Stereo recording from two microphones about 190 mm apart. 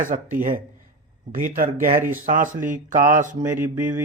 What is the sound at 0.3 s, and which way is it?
Speech, 45° right (ahead or behind).